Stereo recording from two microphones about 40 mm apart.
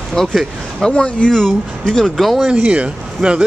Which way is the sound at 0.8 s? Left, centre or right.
Left.